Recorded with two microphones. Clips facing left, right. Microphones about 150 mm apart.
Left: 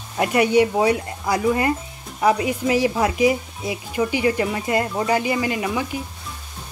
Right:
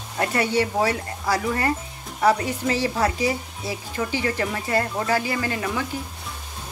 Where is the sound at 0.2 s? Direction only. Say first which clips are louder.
Left 5 dB; 15° left (ahead or behind).